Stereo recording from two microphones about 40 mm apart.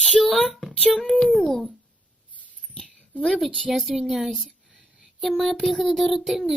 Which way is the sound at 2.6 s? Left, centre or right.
Centre.